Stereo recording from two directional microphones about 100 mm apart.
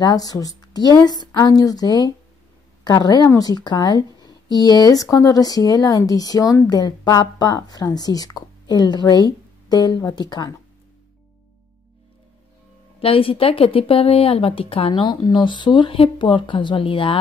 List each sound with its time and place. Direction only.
0.0 s a woman's voice: 40° left (ahead or behind)
13.0 s speech: 65° left (ahead or behind)